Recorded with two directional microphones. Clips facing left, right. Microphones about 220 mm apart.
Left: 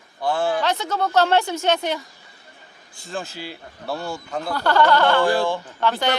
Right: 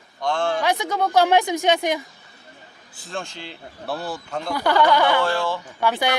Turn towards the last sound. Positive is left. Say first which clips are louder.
# even
turn(degrees=-10)  # may be behind; listen again after turning